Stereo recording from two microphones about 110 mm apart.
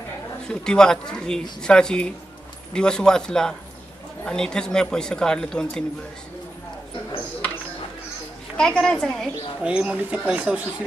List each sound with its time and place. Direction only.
0.5 s speech: 5° left (ahead or behind)
8.5 s a woman's voice: 5° left (ahead or behind)
9.6 s speech: 10° right (ahead or behind)